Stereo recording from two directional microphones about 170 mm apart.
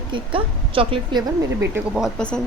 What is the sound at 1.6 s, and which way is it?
Speech, 10° right (ahead or behind).